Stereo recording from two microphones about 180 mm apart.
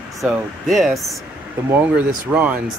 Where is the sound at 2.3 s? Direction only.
5° right (ahead or behind).